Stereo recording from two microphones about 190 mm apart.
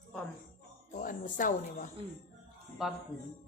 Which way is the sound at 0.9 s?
45° left (ahead or behind).